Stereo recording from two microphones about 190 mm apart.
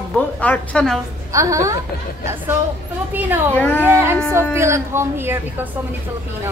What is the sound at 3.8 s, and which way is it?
Speech, 10° right (ahead or behind).